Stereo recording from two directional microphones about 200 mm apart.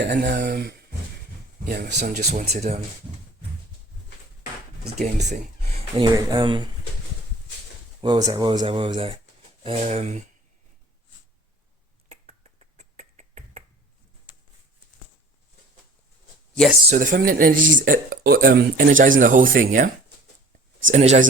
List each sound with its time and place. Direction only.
0.0 s speech: 55° right (ahead or behind)
2.0 s speech: 35° right (ahead or behind)
5.3 s a sound: 30° right (ahead or behind)
6.1 s speech: 25° right (ahead or behind)
8.0 s speech: 20° right (ahead or behind)
12.0 s finger snapping: 35° right (ahead or behind)
16.9 s speech: 40° right (ahead or behind)
20.9 s speech: 35° right (ahead or behind)